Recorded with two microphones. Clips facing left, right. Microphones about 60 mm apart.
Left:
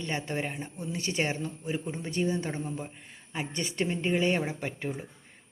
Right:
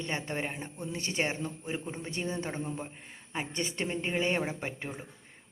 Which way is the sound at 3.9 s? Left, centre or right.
Right.